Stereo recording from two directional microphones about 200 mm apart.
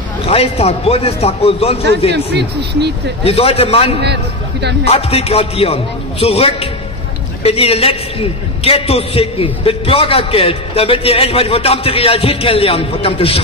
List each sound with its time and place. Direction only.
0.2 s a man's voice: 30° left (ahead or behind)
3.3 s a man's voice: 30° left (ahead or behind)
4.0 s a man's voice: 55° right (ahead or behind)
4.8 s a man's voice: 30° left (ahead or behind)